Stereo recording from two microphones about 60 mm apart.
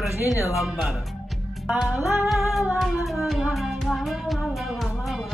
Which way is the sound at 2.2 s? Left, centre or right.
Centre.